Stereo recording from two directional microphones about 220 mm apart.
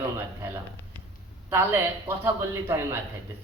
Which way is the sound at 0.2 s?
10° right (ahead or behind).